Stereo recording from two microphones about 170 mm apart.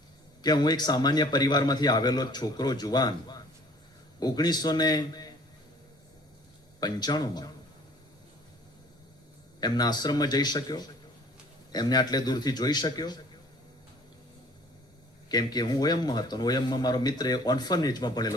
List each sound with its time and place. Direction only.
0.4 s speech: 25° left (ahead or behind)
6.7 s speech: 25° left (ahead or behind)
9.6 s speech: 25° left (ahead or behind)
15.3 s speech: 25° left (ahead or behind)